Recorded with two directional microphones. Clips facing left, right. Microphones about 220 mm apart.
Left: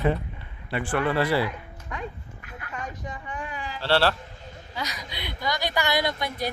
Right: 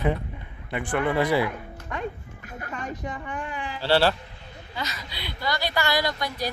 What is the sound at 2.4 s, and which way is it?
Music, 45° right (ahead or behind).